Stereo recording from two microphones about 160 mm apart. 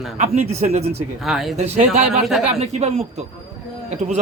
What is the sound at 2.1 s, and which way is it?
Speech, centre (ahead or behind).